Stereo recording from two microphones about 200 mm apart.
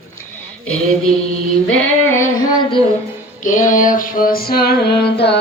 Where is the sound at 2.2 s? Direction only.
20° left (ahead or behind).